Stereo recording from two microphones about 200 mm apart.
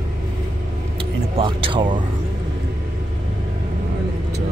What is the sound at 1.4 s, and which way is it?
Speech, 25° right (ahead or behind).